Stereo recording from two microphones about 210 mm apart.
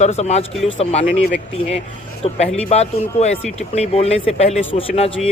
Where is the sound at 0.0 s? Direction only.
30° left (ahead or behind).